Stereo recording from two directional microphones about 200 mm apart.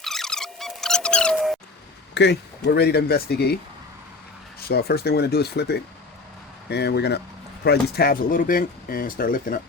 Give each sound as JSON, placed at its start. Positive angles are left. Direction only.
{"t": 0.0, "sound": "a sound", "side_deg": 0}
{"t": 2.1, "sound": "speech", "side_deg": 55}
{"t": 4.7, "sound": "speech", "side_deg": 50}